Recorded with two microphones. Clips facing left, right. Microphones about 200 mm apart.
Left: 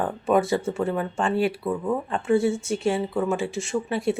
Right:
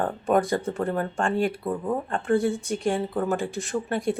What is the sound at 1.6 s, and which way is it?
Speech, 15° right (ahead or behind).